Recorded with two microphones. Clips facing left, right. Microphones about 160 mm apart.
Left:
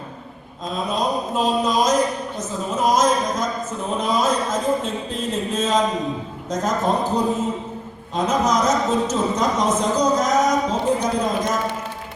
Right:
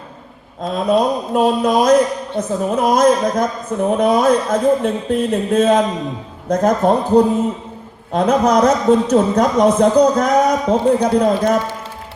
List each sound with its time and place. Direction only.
0.6 s a man's voice: 60° right (ahead or behind)